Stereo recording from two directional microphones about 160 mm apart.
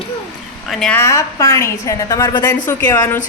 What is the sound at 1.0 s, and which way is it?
A woman's voice, 20° left (ahead or behind).